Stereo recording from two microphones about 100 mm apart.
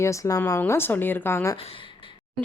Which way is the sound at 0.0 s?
35° left (ahead or behind).